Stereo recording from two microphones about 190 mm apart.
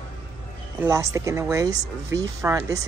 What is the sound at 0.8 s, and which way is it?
Speech, 15° right (ahead or behind).